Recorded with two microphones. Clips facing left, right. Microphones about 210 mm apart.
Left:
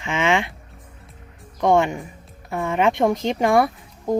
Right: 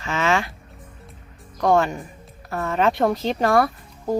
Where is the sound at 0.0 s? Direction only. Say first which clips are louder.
Left 1 dB; 20° left (ahead or behind).